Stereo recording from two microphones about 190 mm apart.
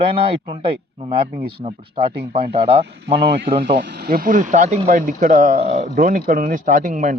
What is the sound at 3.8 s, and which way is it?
Speech, 55° right (ahead or behind).